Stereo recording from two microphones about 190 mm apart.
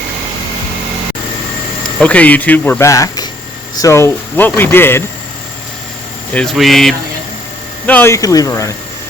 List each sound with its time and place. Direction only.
2.0 s speech: 5° left (ahead or behind)
6.3 s speech: centre (ahead or behind); by 8.7 s 15° left (ahead or behind)